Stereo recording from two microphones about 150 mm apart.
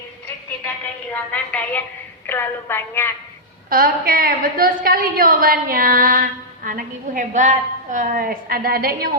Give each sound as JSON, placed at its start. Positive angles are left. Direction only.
{"t": 1.1, "sound": "a woman's voice", "side_deg": 10}
{"t": 3.7, "sound": "a woman's voice", "side_deg": -75}